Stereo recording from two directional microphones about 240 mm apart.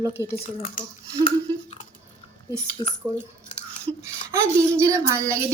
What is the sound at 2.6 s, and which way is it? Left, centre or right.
Speech, left.